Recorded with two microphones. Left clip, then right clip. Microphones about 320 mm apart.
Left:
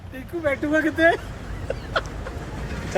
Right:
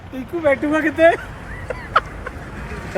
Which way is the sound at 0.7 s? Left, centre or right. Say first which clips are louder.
Right 2 dB; right.